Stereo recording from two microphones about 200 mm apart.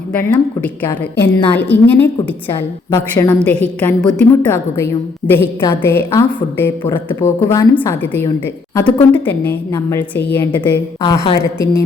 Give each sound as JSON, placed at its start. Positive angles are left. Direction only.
{"t": 0.1, "sound": "a woman's voice", "side_deg": 5}
{"t": 11.0, "sound": "a woman's voice", "side_deg": 25}